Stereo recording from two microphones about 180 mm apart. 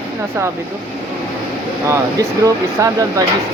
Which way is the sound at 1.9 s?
15° right (ahead or behind).